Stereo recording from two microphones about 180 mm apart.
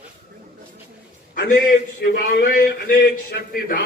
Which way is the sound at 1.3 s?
50° left (ahead or behind).